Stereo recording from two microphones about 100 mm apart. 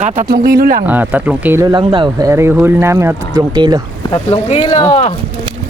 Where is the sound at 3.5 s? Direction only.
45° right (ahead or behind).